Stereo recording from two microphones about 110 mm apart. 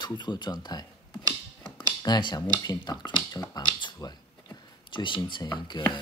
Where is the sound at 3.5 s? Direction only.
40° left (ahead or behind).